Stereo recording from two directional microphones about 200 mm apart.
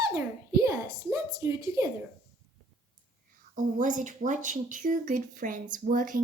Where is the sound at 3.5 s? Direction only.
40° right (ahead or behind).